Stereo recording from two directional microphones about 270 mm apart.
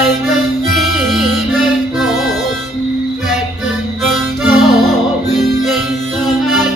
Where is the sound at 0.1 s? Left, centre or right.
Centre.